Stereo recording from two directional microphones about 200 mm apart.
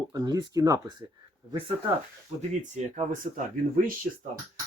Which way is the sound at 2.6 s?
35° right (ahead or behind).